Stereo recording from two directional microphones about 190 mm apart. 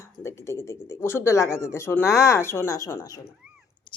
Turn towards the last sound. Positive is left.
turn(degrees=15)  # may be behind; listen again after turning